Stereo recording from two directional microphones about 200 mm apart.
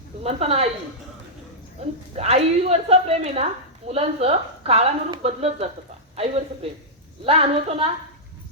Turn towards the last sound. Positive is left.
turn(degrees=-30)  # may be behind; listen again after turning